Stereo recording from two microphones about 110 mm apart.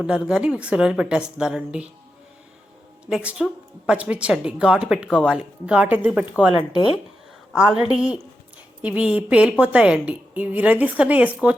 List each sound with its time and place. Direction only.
0.0 s speech: 5° right (ahead or behind)
3.1 s speech: 5° right (ahead or behind)
6.5 s speech: 50° left (ahead or behind)
7.5 s speech: 5° right (ahead or behind)